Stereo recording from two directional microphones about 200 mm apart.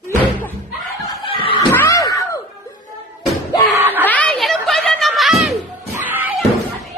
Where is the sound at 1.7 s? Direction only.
15° left (ahead or behind).